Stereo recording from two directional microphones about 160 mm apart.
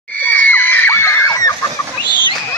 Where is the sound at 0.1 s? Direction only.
10° left (ahead or behind).